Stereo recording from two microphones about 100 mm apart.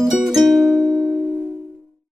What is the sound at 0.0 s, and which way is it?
Music, 5° right (ahead or behind).